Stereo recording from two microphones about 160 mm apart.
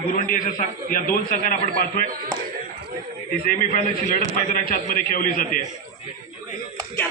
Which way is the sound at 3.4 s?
65° left (ahead or behind).